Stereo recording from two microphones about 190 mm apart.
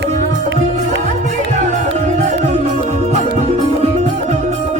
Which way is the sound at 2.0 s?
35° right (ahead or behind).